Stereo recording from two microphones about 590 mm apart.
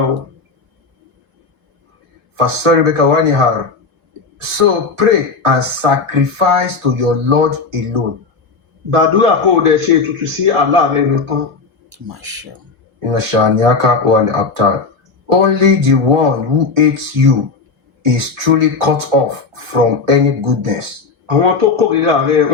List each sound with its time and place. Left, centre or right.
2.3 s speech: right
13.0 s speech: right